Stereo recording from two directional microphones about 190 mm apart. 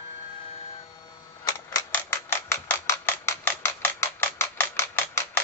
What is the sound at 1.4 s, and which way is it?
Typewriter, 20° left (ahead or behind).